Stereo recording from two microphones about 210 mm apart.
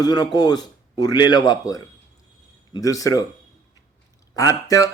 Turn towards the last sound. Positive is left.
turn(degrees=15)  # may be behind; listen again after turning